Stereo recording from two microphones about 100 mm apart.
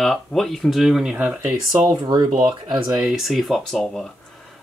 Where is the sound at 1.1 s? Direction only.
15° right (ahead or behind).